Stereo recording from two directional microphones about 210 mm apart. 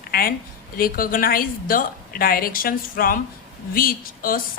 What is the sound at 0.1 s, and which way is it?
A woman's voice, 45° left (ahead or behind).